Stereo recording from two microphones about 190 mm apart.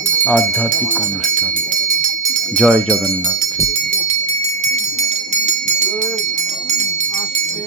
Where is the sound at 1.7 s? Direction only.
45° right (ahead or behind).